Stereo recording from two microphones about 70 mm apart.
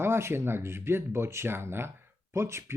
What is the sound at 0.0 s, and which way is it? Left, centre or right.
A man's voice, right.